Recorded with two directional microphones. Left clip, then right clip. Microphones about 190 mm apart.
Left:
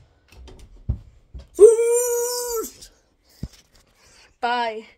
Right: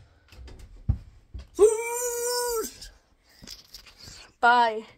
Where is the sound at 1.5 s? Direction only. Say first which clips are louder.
Left 9 dB; centre (ahead or behind).